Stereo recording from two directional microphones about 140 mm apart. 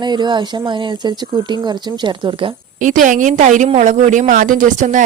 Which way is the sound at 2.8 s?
70° right (ahead or behind).